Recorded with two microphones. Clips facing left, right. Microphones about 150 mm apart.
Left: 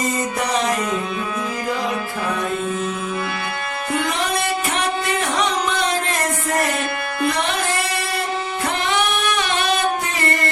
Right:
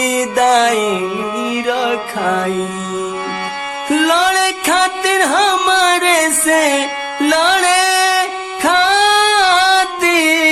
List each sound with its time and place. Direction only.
0.0 s music: 90° right
3.8 s music: 90° right